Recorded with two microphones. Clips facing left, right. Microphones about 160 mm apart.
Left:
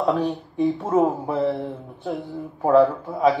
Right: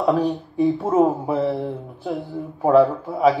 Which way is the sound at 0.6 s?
Centre (ahead or behind).